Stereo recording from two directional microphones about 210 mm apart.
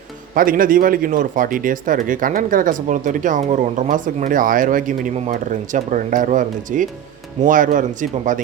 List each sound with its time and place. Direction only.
0.3 s speech: 40° right (ahead or behind)